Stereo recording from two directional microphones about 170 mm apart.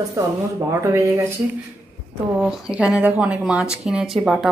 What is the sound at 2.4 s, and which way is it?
Speech, 5° right (ahead or behind).